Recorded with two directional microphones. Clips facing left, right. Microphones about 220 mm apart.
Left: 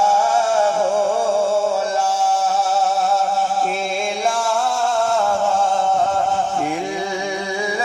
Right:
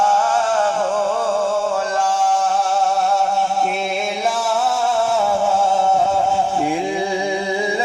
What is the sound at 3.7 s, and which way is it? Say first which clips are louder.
Music: even; centre (ahead or behind).